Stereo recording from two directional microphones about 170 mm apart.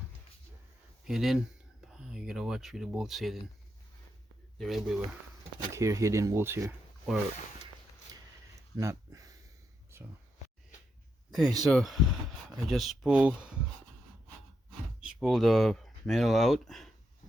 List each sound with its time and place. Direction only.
1.0 s speech: centre (ahead or behind)
4.5 s speech: centre (ahead or behind)
5.7 s speech: 20° right (ahead or behind)
8.7 s a sound: 20° right (ahead or behind)
11.3 s speech: 5° right (ahead or behind)
15.0 s speech: centre (ahead or behind)